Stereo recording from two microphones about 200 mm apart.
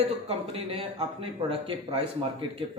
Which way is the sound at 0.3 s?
30° right (ahead or behind).